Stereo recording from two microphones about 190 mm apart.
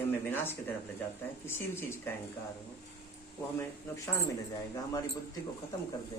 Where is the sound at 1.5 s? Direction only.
10° left (ahead or behind).